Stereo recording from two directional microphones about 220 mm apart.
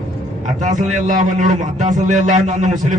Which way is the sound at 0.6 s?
35° right (ahead or behind).